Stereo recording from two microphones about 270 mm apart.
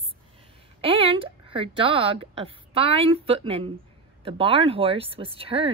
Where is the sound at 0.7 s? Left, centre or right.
Centre.